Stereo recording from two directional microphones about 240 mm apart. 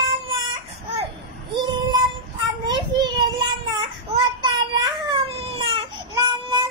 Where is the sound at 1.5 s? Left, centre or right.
Centre.